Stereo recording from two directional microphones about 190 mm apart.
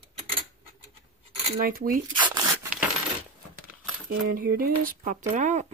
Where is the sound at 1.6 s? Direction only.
50° right (ahead or behind).